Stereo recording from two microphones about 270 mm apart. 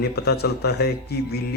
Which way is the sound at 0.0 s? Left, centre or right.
Left.